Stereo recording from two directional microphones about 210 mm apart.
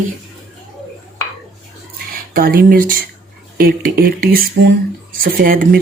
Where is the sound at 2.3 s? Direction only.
45° right (ahead or behind).